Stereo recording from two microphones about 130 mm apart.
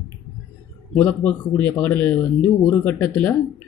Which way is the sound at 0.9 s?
15° left (ahead or behind).